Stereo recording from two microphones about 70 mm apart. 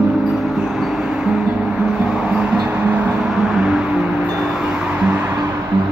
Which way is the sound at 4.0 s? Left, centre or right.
Centre.